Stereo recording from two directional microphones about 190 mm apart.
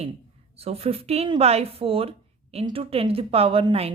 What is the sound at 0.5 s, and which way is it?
A woman's voice, 30° right (ahead or behind).